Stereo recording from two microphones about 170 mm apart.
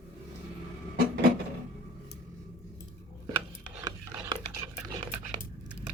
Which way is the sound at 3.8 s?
25° right (ahead or behind).